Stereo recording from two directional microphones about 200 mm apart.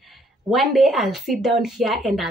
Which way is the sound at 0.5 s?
Centre (ahead or behind).